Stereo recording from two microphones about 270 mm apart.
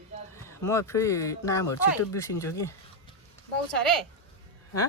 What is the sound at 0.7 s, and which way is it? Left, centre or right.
Speech, centre.